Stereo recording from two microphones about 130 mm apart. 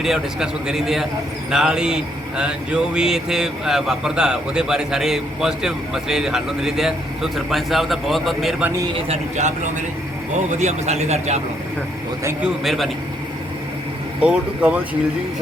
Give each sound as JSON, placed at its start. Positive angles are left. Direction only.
{"t": 0.0, "sound": "a man's voice", "side_deg": -5}
{"t": 9.0, "sound": "a man's voice", "side_deg": -65}
{"t": 10.5, "sound": "a man's voice", "side_deg": -65}
{"t": 12.4, "sound": "a man's voice", "side_deg": 0}
{"t": 14.2, "sound": "speech", "side_deg": -10}